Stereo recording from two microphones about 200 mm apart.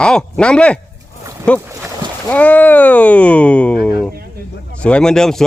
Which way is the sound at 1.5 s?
10° right (ahead or behind).